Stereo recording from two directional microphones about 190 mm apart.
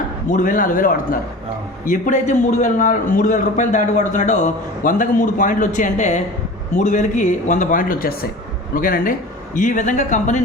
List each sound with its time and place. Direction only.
0.3 s a man's voice: 45° left (ahead or behind)